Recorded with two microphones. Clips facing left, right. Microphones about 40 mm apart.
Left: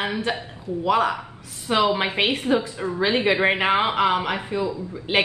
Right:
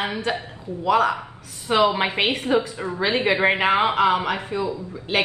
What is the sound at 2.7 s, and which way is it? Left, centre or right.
Speech, right.